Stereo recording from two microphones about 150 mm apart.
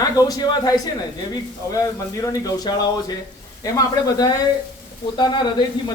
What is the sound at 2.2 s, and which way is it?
Speech, 25° left (ahead or behind).